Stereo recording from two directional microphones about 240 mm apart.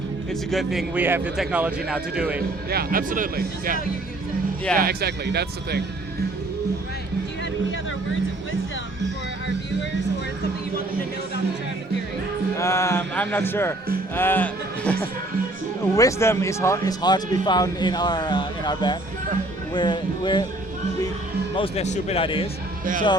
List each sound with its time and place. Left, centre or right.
0.5 s a man's voice: centre
2.6 s speech: right
4.8 s speech: right
12.5 s music: centre
14.2 s a man's voice: centre
21.5 s speech: left